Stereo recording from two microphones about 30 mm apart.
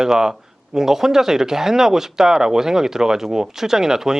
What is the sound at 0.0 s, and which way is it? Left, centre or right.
A man's voice, centre.